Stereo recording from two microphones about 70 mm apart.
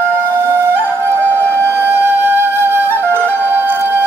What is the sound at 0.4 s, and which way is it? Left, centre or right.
Music, right.